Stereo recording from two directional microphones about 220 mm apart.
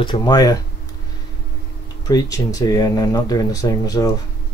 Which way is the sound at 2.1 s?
15° left (ahead or behind).